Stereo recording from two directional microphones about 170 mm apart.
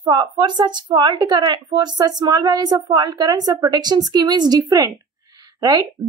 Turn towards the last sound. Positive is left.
turn(degrees=-20)  # may be behind; listen again after turning